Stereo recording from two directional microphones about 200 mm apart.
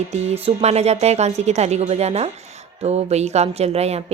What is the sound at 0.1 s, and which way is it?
Speech, 35° right (ahead or behind).